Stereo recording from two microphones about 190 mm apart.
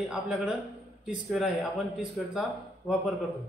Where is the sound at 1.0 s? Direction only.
5° right (ahead or behind).